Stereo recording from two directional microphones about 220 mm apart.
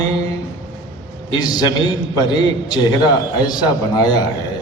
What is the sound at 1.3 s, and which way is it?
A man's voice, 20° left (ahead or behind).